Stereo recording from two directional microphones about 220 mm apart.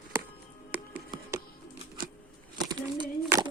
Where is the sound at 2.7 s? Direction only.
20° right (ahead or behind).